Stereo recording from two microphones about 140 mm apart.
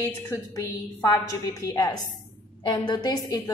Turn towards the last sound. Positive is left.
turn(degrees=30)  # may be behind; listen again after turning